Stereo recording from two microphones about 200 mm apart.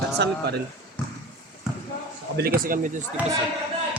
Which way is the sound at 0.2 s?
55° right (ahead or behind).